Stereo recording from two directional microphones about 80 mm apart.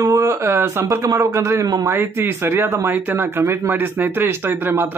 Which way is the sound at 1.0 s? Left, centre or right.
Right.